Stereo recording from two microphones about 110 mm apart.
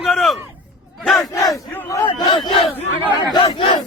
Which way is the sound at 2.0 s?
45° left (ahead or behind).